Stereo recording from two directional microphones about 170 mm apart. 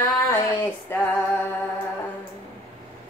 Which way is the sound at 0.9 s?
15° left (ahead or behind).